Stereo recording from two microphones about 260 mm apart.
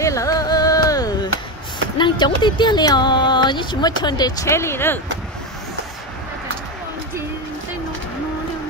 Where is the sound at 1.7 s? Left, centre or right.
Centre.